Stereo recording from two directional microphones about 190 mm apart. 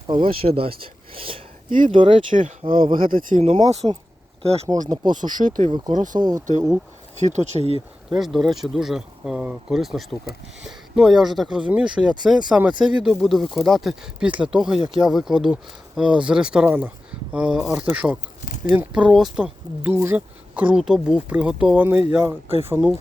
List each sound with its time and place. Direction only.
0.1 s speech: 25° right (ahead or behind)
2.4 s speech: 45° right (ahead or behind)
3.4 s speech: 30° right (ahead or behind)
5.3 s speech: 45° right (ahead or behind)
5.7 s speech: 20° right (ahead or behind)
7.2 s speech: 35° right (ahead or behind)
8.2 s speech: centre (ahead or behind)
18.4 s speech: 50° left (ahead or behind)
18.7 s speech: 5° right (ahead or behind)